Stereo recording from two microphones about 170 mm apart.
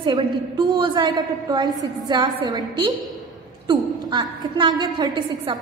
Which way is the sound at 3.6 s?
25° right (ahead or behind).